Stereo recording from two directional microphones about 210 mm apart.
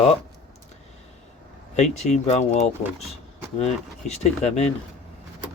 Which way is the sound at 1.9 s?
35° left (ahead or behind).